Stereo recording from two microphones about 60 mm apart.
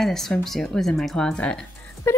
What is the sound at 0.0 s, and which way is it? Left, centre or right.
Speech, centre.